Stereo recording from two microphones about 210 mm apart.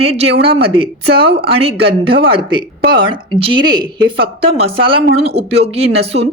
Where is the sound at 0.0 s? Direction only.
30° right (ahead or behind).